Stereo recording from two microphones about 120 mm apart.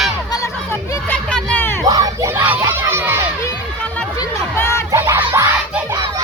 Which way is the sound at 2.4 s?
15° right (ahead or behind).